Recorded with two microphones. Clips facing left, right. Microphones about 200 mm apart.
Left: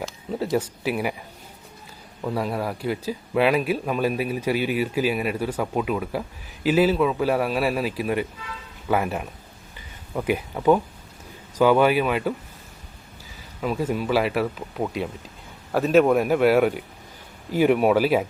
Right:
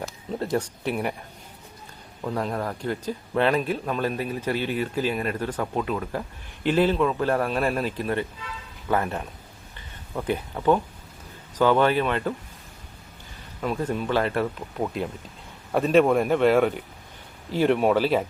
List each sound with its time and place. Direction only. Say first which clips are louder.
0.3 s a man's voice: left 2 dB; 5° left (ahead or behind)
2.2 s speech: left 2 dB; 10° left (ahead or behind)
9.7 s a sound: left 3 dB; 10° left (ahead or behind)
11.5 s speech: left 2 dB; 10° left (ahead or behind)
13.6 s a man's voice: left 2 dB; 5° left (ahead or behind)